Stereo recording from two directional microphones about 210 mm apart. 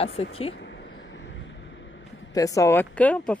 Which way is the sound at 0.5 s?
60° left (ahead or behind).